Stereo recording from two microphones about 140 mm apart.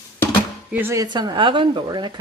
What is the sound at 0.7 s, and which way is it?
Speech, 20° right (ahead or behind).